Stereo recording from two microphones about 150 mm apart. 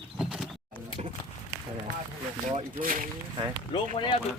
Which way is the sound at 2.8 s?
65° right (ahead or behind).